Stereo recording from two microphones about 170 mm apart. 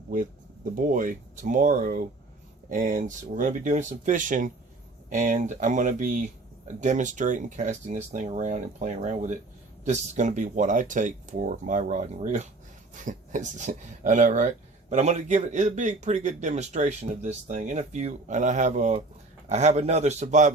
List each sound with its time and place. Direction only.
0.1 s a man's voice: 55° right (ahead or behind)